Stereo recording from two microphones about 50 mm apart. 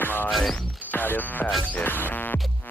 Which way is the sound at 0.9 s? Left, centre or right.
Left.